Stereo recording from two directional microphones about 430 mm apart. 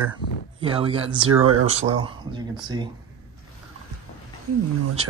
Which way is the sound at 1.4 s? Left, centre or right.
Right.